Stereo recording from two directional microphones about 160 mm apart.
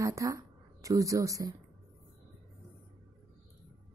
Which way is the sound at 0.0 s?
20° right (ahead or behind).